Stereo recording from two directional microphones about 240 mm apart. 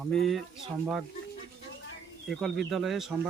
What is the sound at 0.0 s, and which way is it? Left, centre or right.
Speech, centre.